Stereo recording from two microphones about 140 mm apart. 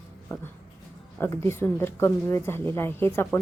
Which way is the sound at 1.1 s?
15° left (ahead or behind).